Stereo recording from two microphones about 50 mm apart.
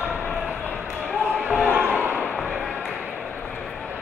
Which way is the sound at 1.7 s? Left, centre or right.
Right.